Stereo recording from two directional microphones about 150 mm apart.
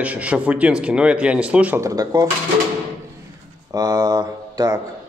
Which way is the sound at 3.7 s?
25° right (ahead or behind).